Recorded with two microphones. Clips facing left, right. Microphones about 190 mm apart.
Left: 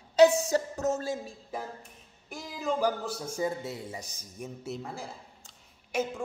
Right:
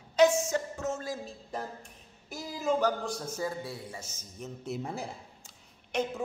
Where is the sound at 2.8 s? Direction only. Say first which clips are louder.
Even; 10° left (ahead or behind).